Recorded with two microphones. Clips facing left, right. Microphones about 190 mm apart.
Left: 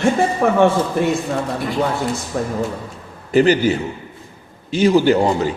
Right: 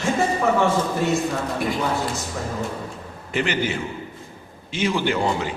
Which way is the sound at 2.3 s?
55° left (ahead or behind).